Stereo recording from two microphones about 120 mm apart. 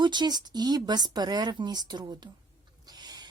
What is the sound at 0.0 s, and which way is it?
Speech, 40° right (ahead or behind).